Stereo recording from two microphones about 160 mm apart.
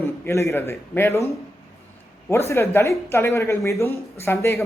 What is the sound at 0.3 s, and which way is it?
Speech, 15° left (ahead or behind).